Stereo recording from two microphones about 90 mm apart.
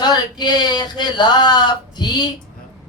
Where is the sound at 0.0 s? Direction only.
50° left (ahead or behind).